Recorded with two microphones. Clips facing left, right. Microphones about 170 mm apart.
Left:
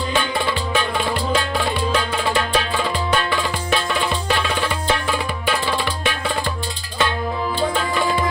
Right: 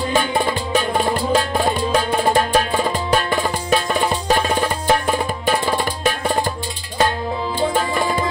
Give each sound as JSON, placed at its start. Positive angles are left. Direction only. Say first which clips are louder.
{"t": 0.1, "sound": "music", "louder": "right 3 dB", "side_deg": -45}